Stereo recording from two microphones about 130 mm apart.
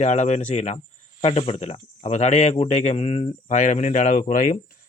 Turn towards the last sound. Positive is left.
turn(degrees=80)